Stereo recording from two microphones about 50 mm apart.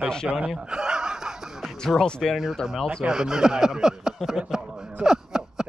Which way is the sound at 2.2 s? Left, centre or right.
Centre.